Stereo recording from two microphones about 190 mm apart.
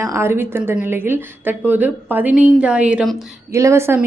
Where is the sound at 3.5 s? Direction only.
15° right (ahead or behind).